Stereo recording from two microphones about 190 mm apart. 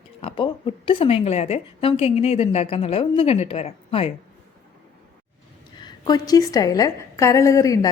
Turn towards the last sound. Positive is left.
turn(degrees=15)  # may be behind; listen again after turning